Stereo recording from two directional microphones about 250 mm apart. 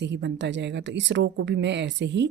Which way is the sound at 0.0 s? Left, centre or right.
Right.